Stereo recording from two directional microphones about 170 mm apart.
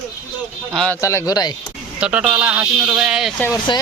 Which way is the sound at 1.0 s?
15° left (ahead or behind).